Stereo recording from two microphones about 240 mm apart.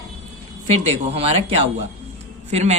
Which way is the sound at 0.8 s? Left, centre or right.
Right.